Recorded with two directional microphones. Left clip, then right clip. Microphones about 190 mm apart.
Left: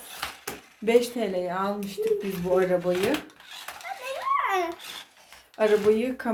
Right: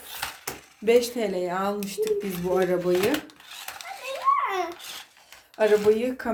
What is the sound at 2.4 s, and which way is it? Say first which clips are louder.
Speech: left 1 dB; 15° right (ahead or behind).